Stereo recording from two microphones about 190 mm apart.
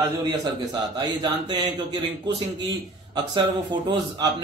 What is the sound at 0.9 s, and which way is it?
A man's voice, 25° right (ahead or behind).